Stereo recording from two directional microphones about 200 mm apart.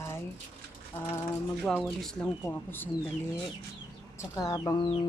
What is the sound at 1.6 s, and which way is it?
A woman's voice, centre (ahead or behind).